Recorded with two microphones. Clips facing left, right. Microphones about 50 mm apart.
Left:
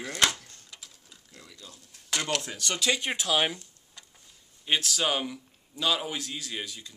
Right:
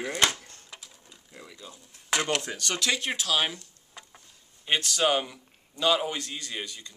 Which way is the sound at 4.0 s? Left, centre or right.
Centre.